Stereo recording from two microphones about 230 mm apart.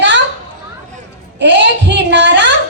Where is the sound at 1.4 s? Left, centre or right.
Right.